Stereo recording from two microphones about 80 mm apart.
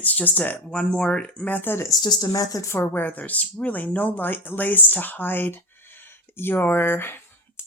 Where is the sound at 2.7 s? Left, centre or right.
Left.